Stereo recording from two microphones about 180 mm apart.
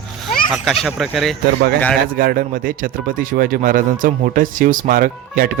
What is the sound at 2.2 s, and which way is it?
Speech, 55° right (ahead or behind).